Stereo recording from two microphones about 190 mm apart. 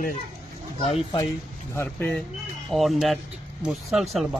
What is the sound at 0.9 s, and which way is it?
Speech, 30° left (ahead or behind).